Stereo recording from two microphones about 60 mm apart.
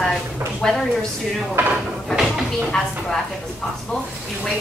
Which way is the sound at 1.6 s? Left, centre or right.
Right.